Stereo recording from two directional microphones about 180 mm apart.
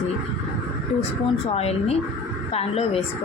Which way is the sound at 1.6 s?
35° left (ahead or behind).